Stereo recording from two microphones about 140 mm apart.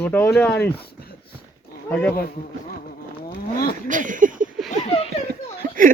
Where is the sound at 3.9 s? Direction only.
70° right (ahead or behind).